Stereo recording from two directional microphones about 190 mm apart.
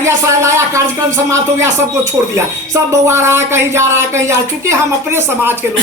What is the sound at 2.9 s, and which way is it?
A man's voice, 15° right (ahead or behind).